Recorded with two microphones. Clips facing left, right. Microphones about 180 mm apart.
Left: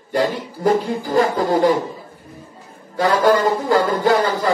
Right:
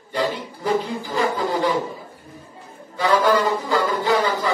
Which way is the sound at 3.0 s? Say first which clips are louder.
Left 3 dB; 45° left (ahead or behind).